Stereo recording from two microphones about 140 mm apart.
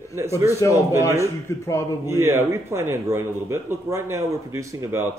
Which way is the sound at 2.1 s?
20° right (ahead or behind).